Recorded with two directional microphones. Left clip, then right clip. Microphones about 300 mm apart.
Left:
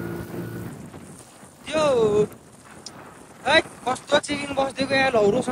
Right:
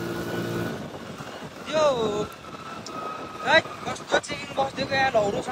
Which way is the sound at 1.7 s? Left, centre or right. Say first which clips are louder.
Even; left.